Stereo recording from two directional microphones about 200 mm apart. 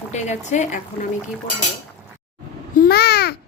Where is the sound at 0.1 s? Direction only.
35° left (ahead or behind).